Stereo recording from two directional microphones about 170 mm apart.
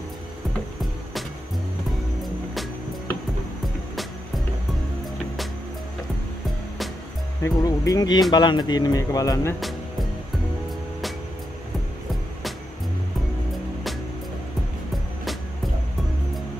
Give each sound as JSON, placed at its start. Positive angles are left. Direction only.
{"t": 7.4, "sound": "speech", "side_deg": 20}
{"t": 9.6, "sound": "music", "side_deg": 0}